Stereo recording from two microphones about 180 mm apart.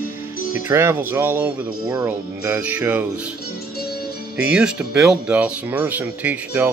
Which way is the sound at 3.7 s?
60° left (ahead or behind).